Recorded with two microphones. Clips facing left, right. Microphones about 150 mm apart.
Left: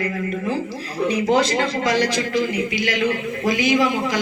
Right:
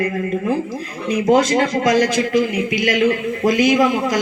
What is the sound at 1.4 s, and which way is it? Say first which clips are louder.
A man's voice: right 3 dB; 45° right (ahead or behind).